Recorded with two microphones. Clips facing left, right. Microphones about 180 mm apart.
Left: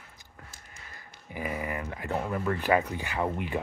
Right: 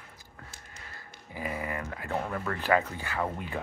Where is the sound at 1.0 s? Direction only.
20° left (ahead or behind).